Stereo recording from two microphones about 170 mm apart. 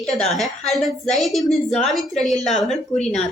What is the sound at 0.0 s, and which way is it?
Speech, centre (ahead or behind).